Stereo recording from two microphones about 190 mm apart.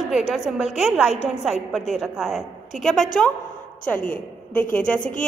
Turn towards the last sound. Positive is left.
turn(degrees=45)  # may be behind; listen again after turning